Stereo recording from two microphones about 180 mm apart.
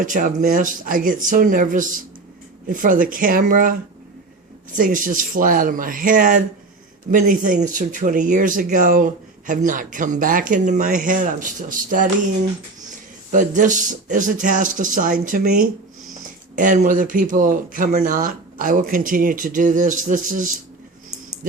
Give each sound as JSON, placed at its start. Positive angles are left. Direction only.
{"t": 0.0, "sound": "speech", "side_deg": -45}
{"t": 13.3, "sound": "speech", "side_deg": -45}